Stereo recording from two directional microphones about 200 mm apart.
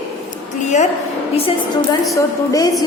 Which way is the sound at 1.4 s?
25° left (ahead or behind).